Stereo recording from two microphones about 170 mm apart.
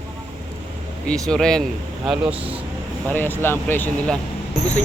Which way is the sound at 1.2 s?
5° left (ahead or behind).